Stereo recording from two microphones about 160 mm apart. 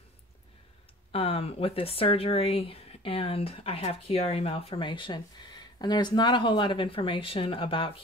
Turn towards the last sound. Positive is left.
turn(degrees=35)  # may be behind; listen again after turning